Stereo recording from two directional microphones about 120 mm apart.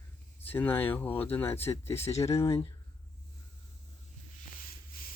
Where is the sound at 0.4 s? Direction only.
15° left (ahead or behind).